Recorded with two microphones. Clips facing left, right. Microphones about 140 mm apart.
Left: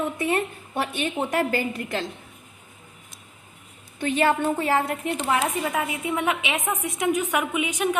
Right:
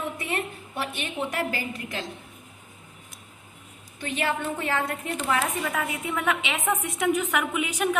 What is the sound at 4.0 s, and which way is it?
A woman's voice, 50° left (ahead or behind).